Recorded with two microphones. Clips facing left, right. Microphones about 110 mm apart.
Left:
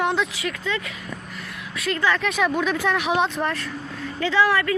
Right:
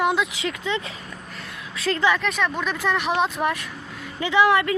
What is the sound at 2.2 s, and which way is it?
Speech, centre (ahead or behind).